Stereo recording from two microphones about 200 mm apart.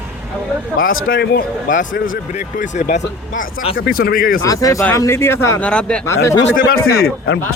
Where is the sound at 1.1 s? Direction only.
50° left (ahead or behind).